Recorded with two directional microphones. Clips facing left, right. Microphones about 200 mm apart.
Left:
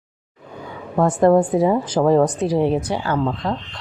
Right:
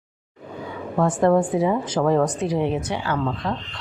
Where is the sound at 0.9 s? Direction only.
40° left (ahead or behind).